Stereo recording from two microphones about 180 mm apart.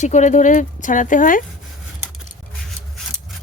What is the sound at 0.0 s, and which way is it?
Speech, 40° left (ahead or behind).